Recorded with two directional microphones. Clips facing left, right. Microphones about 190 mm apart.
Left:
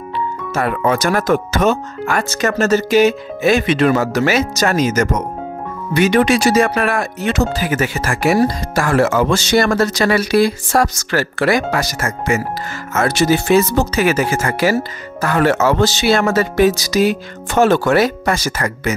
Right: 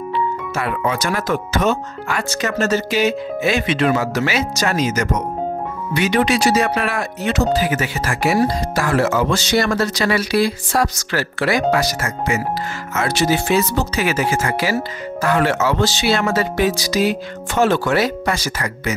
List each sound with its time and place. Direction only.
0.6 s speech: 45° left (ahead or behind)